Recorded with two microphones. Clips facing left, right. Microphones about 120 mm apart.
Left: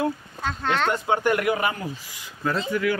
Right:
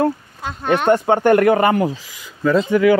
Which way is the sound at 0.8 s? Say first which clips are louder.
Right 10 dB; 50° right (ahead or behind).